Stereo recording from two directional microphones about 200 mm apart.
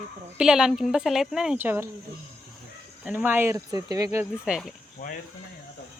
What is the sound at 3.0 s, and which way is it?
A woman's voice, 10° right (ahead or behind).